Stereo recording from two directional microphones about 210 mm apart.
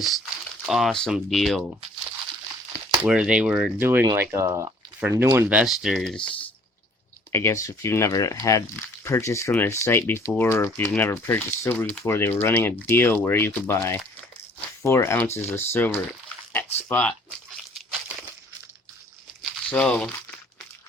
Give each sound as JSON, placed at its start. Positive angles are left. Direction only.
{"t": 0.6, "sound": "speech", "side_deg": 0}
{"t": 3.0, "sound": "speech", "side_deg": -5}
{"t": 19.4, "sound": "a sound", "side_deg": 5}